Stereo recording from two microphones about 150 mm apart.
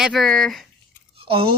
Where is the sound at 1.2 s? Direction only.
40° right (ahead or behind).